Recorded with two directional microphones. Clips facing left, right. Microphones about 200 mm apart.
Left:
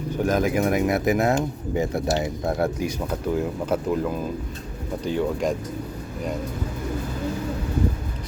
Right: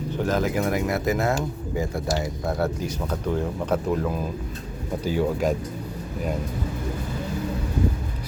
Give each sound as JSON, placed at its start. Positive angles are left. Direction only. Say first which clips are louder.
{"t": 0.3, "sound": "speech", "louder": "left 3 dB", "side_deg": 15}